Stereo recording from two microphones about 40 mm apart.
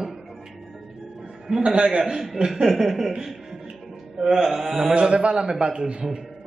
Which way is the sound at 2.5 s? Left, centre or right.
Centre.